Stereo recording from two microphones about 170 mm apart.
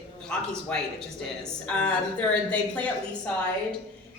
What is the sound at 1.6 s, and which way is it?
A woman's voice, 5° left (ahead or behind).